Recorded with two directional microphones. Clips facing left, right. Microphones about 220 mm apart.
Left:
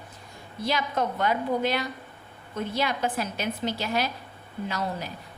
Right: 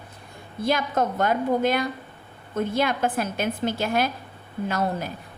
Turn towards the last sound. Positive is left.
turn(degrees=-50)  # may be behind; listen again after turning